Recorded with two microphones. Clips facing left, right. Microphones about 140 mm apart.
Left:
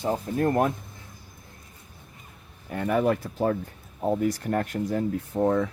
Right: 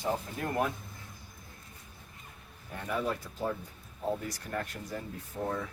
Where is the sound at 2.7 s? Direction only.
70° left (ahead or behind).